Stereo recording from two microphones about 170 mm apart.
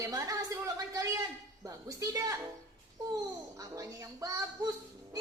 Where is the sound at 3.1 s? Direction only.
20° right (ahead or behind).